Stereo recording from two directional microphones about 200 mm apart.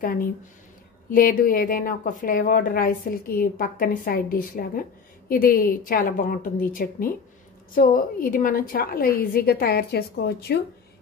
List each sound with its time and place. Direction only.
0.0 s a woman's voice: 45° left (ahead or behind)